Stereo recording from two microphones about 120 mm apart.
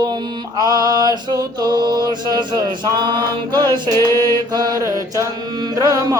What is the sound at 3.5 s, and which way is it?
Chant, 35° right (ahead or behind).